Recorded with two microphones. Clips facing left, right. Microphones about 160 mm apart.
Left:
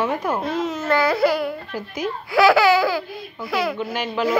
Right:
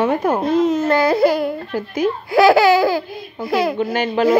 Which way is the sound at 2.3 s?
40° right (ahead or behind).